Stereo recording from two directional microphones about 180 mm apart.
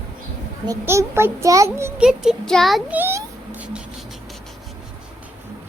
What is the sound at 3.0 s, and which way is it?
Speech, 15° right (ahead or behind).